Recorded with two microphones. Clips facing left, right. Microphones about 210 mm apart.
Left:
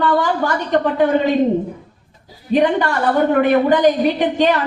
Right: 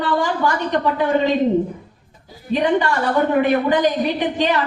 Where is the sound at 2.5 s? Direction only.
45° left (ahead or behind).